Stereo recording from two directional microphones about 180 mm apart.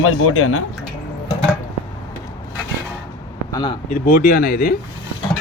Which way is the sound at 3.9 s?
50° left (ahead or behind).